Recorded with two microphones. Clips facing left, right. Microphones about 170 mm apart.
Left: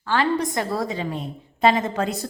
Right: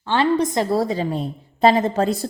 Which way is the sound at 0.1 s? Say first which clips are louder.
Right 3 dB; 20° right (ahead or behind).